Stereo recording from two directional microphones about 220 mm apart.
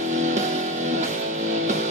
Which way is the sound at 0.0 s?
30° right (ahead or behind).